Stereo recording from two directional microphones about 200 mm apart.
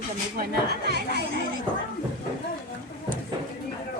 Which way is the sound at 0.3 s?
50° right (ahead or behind).